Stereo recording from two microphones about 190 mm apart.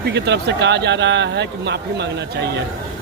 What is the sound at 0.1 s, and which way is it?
Speech, 65° right (ahead or behind).